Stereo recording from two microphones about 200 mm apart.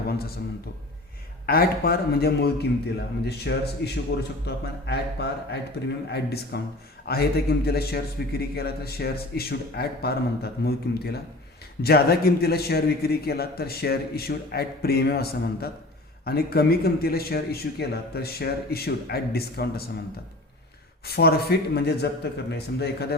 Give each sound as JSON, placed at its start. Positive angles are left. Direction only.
{"t": 1.5, "sound": "a man's voice", "side_deg": 50}
{"t": 21.0, "sound": "a man's voice", "side_deg": 50}